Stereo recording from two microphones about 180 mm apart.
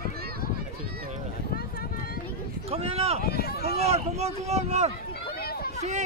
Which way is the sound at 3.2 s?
60° left (ahead or behind).